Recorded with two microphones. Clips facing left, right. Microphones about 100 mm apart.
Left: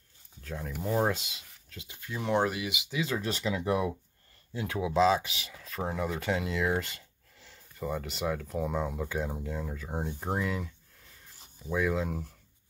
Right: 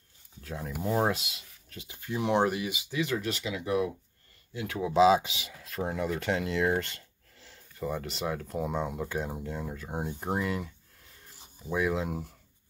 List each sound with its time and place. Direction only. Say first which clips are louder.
0.4 s speech: right 1 dB; 5° right (ahead or behind)
3.1 s speech: left 1 dB; 35° left (ahead or behind)
4.5 s speech: left 1 dB; 25° left (ahead or behind)
4.9 s speech: right 3 dB; 10° right (ahead or behind)
5.2 s speech: right 1 dB; 20° right (ahead or behind)
5.6 s speech: right 1 dB; centre (ahead or behind)
11.7 s speech: even; 5° right (ahead or behind)